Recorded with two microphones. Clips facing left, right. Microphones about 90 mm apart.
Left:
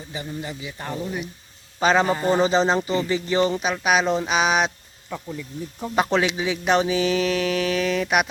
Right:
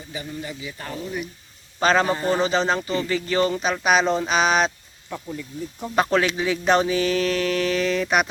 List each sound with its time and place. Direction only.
0.1 s speech: 25° left (ahead or behind)
1.8 s mantra: 10° left (ahead or behind)
2.3 s speech: 30° left (ahead or behind)
3.5 s speech: 5° left (ahead or behind)
6.1 s mantra: 10° left (ahead or behind)